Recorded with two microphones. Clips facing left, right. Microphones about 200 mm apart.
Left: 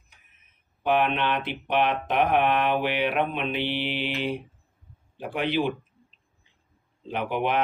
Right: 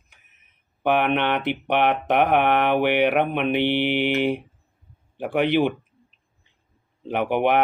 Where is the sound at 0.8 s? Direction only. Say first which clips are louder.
Right 3 dB; 60° right (ahead or behind).